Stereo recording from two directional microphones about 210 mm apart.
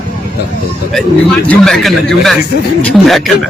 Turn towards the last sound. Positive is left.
turn(degrees=0)  # may be behind; listen again after turning